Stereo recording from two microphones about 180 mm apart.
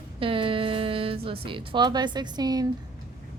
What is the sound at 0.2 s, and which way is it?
A woman's voice, 30° right (ahead or behind).